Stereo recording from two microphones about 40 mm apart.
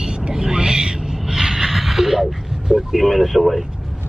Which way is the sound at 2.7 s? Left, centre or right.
Centre.